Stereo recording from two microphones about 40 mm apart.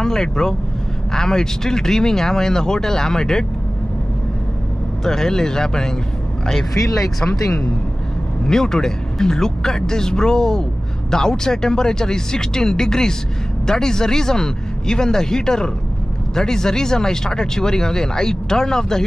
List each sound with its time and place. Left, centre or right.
0.0 s speech: centre
5.0 s speech: centre